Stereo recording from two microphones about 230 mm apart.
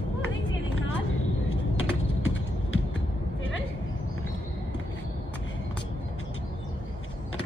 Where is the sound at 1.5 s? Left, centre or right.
Left.